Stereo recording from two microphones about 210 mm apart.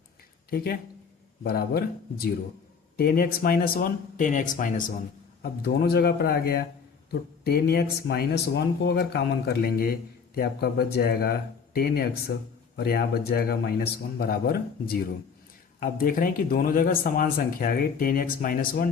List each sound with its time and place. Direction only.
0.5 s speech: 45° left (ahead or behind)